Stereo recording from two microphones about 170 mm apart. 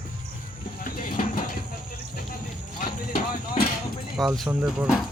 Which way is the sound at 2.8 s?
55° left (ahead or behind).